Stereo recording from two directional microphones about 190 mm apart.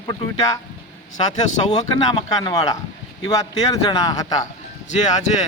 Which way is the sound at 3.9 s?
20° left (ahead or behind).